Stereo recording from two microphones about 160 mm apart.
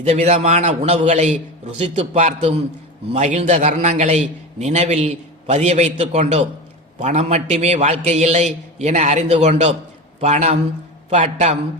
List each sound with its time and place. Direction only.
0.0 s a man's voice: 40° right (ahead or behind)